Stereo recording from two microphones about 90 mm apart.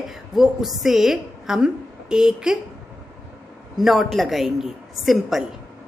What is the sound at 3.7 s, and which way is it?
A woman's voice, centre (ahead or behind).